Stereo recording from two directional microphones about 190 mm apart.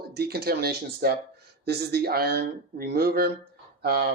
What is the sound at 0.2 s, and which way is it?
Speech, 55° right (ahead or behind).